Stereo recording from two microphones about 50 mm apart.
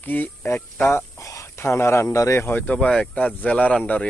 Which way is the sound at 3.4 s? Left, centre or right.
Left.